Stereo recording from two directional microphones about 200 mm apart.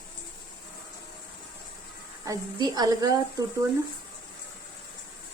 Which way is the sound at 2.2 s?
20° right (ahead or behind).